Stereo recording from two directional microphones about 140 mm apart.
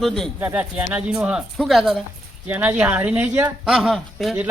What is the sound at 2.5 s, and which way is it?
Speech, 10° right (ahead or behind).